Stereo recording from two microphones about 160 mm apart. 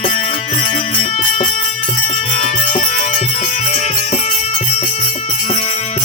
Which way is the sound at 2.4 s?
50° left (ahead or behind).